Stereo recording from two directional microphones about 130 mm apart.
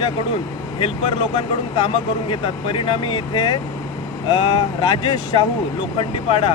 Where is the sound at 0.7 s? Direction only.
45° left (ahead or behind).